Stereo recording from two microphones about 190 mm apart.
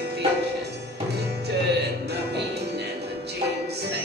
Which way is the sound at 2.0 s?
60° right (ahead or behind).